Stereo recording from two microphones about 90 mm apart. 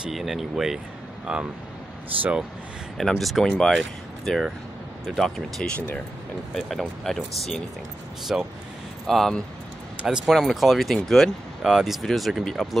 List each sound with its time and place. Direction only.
0.0 s speech: centre (ahead or behind)
3.0 s speech: centre (ahead or behind)
5.7 s speech: 15° left (ahead or behind)
6.5 s speech: 5° left (ahead or behind)
8.3 s speech: 5° right (ahead or behind)
9.0 s speech: 5° left (ahead or behind)